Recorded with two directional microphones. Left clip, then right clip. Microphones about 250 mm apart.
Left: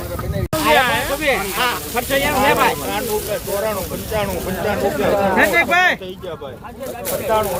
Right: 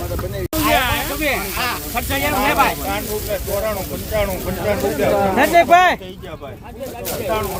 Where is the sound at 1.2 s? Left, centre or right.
Right.